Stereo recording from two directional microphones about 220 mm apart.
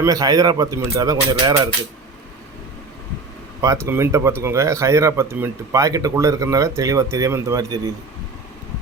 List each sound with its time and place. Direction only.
0.0 s speech: 15° right (ahead or behind)
3.6 s speech: 15° right (ahead or behind)